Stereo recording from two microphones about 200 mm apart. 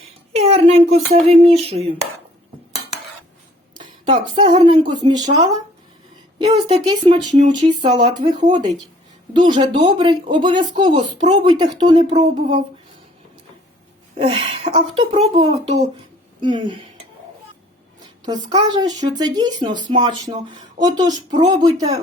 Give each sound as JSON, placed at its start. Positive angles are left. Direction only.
{"t": 0.3, "sound": "speech", "side_deg": -30}
{"t": 3.8, "sound": "music", "side_deg": -35}
{"t": 4.3, "sound": "speech", "side_deg": -25}
{"t": 6.4, "sound": "speech", "side_deg": -25}
{"t": 14.2, "sound": "speech", "side_deg": -30}
{"t": 18.3, "sound": "speech", "side_deg": -20}